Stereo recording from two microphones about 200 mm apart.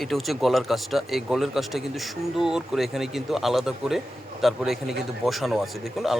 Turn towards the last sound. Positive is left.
turn(degrees=0)  # may be behind; listen again after turning